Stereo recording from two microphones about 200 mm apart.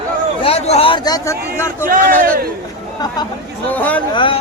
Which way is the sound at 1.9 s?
45° right (ahead or behind).